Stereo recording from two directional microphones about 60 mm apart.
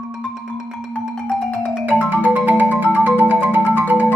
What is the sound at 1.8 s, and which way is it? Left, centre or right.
Music, right.